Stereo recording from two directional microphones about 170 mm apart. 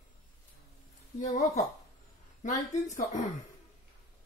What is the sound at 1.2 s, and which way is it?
Speech, 45° left (ahead or behind).